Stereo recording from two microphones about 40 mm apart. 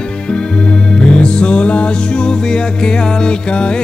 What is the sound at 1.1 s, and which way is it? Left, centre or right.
Music, left.